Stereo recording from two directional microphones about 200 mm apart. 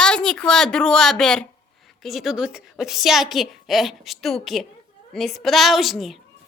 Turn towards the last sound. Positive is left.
turn(degrees=0)  # may be behind; listen again after turning